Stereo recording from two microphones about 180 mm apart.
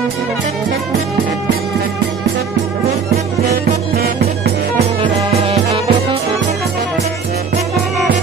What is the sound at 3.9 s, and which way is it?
Music, 60° right (ahead or behind).